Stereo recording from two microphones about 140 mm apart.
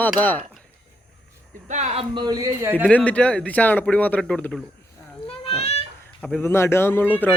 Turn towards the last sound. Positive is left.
turn(degrees=15)  # may be behind; listen again after turning